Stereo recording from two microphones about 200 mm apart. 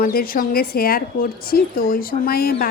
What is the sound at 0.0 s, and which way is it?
Speech, 45° left (ahead or behind).